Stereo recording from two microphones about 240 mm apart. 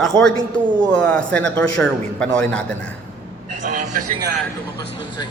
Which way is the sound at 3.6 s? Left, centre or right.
Right.